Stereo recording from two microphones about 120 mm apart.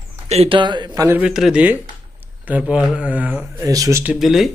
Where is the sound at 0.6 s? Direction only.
40° right (ahead or behind).